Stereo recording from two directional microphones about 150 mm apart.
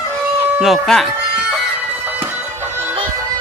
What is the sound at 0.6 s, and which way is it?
Speech, centre (ahead or behind).